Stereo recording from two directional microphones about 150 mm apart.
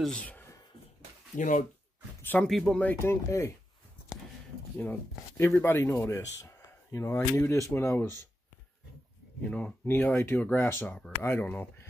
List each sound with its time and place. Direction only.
0.0 s speech: 10° left (ahead or behind)
1.3 s speech: 60° left (ahead or behind)
2.2 s speech: 10° left (ahead or behind)
5.4 s speech: 15° left (ahead or behind)
9.5 s speech: 10° left (ahead or behind)